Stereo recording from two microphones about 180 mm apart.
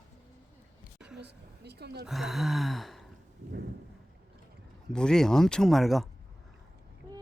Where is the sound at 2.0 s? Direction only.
Centre (ahead or behind).